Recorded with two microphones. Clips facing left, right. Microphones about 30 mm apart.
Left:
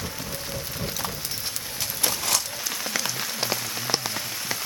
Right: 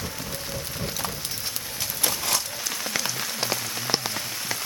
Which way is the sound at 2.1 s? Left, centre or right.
Centre.